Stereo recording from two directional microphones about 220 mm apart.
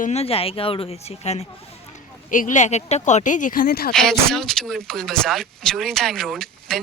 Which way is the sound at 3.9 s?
Centre (ahead or behind).